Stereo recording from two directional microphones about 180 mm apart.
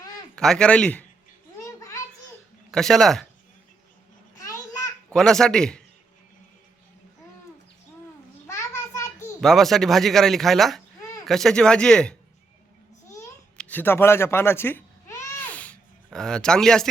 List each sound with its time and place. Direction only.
0.3 s speech: 5° left (ahead or behind)
2.7 s speech: centre (ahead or behind)
4.4 s a sound: 15° left (ahead or behind)
5.0 s a man's voice: 5° left (ahead or behind)
8.4 s child singing: 15° left (ahead or behind)
9.4 s speech: centre (ahead or behind)
13.6 s baby cry: 10° left (ahead or behind)
16.0 s speech: 5° left (ahead or behind)